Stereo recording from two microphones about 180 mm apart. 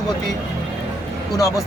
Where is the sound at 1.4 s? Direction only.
20° left (ahead or behind).